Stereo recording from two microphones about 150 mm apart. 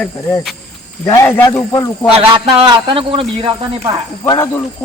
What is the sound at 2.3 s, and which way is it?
Speech, 30° right (ahead or behind).